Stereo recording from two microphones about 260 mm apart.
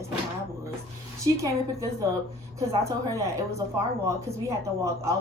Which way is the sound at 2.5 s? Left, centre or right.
Centre.